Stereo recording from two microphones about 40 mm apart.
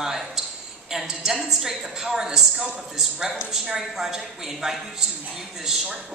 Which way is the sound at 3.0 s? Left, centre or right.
Centre.